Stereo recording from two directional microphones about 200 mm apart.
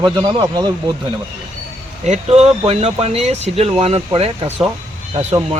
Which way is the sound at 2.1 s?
30° right (ahead or behind).